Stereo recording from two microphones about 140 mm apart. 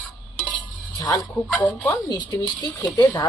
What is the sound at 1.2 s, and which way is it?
Speech, 10° left (ahead or behind).